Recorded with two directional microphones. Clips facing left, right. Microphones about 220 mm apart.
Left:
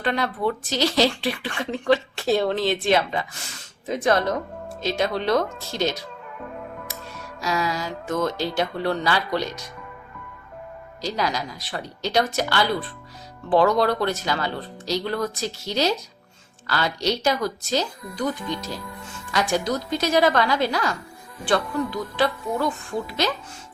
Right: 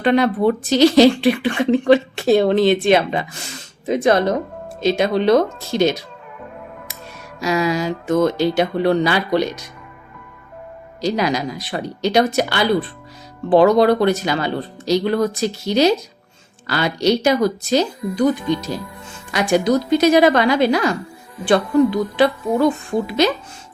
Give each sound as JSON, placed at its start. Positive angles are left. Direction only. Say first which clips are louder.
{"t": 0.0, "sound": "speech", "louder": "right 9 dB", "side_deg": -20}
{"t": 7.4, "sound": "speech", "louder": "right 7 dB", "side_deg": -15}
{"t": 11.0, "sound": "speech", "louder": "right 7 dB", "side_deg": -15}